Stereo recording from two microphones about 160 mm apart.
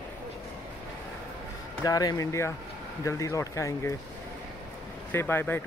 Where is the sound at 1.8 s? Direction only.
20° left (ahead or behind).